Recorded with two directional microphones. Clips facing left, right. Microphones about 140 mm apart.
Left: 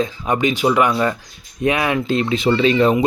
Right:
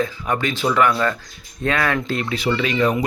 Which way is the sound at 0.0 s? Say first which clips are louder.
Left 3 dB; 20° left (ahead or behind).